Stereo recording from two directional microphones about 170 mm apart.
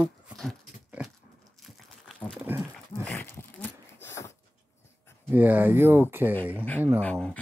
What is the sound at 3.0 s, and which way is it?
Dog, 10° left (ahead or behind).